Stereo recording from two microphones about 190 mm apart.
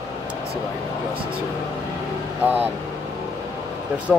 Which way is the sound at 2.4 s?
10° right (ahead or behind).